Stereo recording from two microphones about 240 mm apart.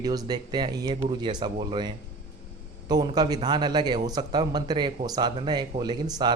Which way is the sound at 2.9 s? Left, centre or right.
Centre.